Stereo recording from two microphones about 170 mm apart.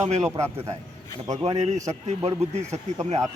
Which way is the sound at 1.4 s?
35° right (ahead or behind).